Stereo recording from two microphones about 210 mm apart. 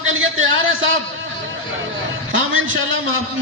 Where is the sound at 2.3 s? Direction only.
65° right (ahead or behind).